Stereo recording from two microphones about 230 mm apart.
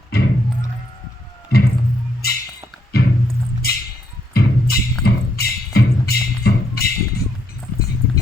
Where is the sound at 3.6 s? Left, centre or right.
Left.